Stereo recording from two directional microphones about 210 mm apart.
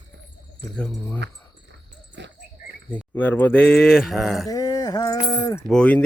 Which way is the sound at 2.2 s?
55° right (ahead or behind).